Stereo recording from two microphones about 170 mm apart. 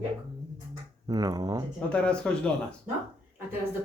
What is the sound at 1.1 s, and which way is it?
Speech, 20° right (ahead or behind).